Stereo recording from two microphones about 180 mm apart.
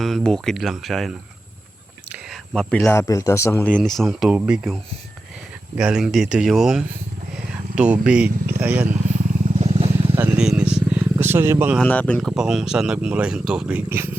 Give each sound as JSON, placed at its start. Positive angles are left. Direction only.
{"t": 0.0, "sound": "speech", "side_deg": 0}
{"t": 7.3, "sound": "vehicle", "side_deg": -5}
{"t": 8.0, "sound": "speech", "side_deg": -5}
{"t": 8.9, "sound": "vehicle", "side_deg": -40}
{"t": 10.1, "sound": "vehicle", "side_deg": -10}
{"t": 11.8, "sound": "speech", "side_deg": 5}